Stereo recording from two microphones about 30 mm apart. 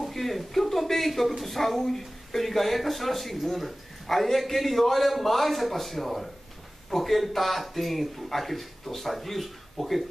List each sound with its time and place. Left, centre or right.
0.1 s speech: centre